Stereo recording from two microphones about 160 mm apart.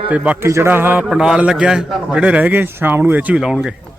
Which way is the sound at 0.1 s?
10° right (ahead or behind).